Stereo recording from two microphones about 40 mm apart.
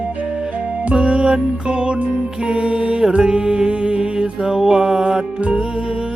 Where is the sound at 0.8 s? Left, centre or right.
Right; by 5.2 s centre.